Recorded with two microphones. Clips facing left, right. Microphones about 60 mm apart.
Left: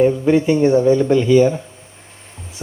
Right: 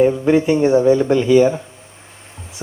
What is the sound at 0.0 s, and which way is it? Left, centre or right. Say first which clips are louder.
Speech: even; centre.